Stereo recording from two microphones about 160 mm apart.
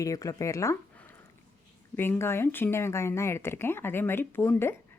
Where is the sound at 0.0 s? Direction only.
20° left (ahead or behind).